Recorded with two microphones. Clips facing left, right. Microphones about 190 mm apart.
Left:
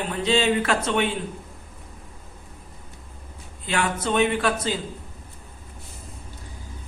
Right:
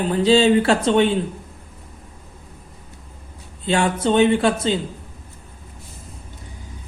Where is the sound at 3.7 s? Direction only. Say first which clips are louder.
Right 6 dB; 30° right (ahead or behind).